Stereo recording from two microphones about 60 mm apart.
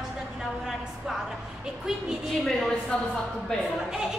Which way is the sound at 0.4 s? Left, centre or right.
Centre.